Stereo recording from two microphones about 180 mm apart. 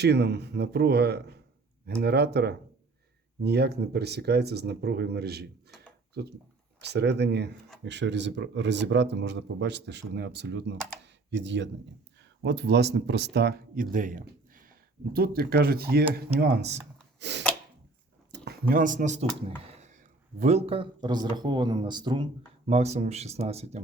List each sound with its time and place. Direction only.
0.0 s speech: 70° right (ahead or behind)
6.8 s speech: 70° right (ahead or behind)
7.9 s speech: 75° right (ahead or behind)
17.2 s a sound: 75° right (ahead or behind)
18.7 s speech: 45° right (ahead or behind)
19.5 s a sound: 35° right (ahead or behind)
20.4 s speech: 35° right (ahead or behind)
22.6 s speech: 35° right (ahead or behind)